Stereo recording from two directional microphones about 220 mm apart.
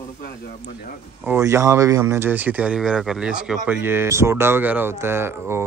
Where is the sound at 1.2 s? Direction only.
15° right (ahead or behind).